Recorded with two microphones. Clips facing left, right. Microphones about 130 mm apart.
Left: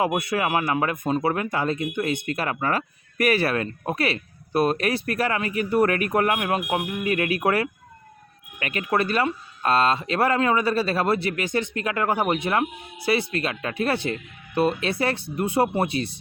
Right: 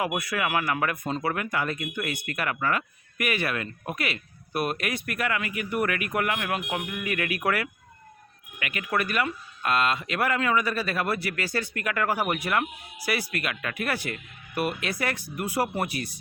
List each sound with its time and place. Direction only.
0.0 s speech: 25° left (ahead or behind)